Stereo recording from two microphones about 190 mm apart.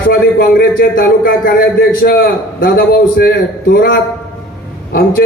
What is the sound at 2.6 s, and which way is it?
A man's voice, 55° left (ahead or behind).